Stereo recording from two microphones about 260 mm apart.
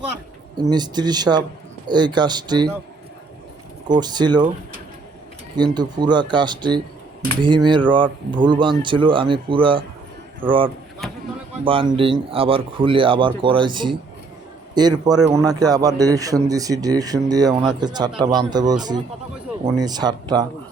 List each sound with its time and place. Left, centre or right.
0.5 s speech: centre
3.8 s speech: centre
5.5 s speech: centre
11.6 s speech: centre